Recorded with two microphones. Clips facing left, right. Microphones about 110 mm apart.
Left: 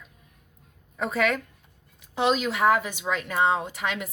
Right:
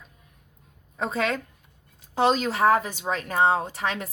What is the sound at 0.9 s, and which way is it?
A woman's voice, 30° right (ahead or behind).